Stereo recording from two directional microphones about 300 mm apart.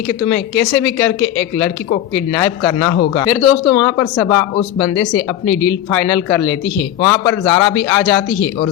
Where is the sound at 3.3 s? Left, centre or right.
Centre.